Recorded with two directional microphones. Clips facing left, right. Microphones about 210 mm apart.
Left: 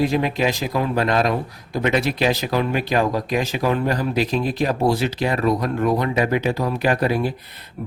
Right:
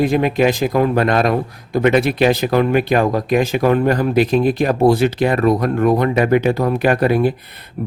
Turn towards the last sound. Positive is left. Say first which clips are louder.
# right 7 dB
turn(degrees=-70)  # may be behind; listen again after turning